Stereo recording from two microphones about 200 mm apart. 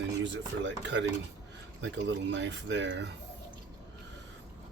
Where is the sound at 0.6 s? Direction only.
60° right (ahead or behind).